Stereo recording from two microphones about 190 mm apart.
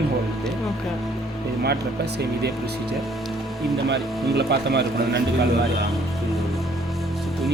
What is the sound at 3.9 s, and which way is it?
Speech, 60° right (ahead or behind).